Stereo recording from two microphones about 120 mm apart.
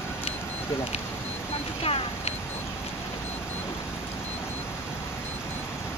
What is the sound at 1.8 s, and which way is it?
Vehicle, 55° left (ahead or behind).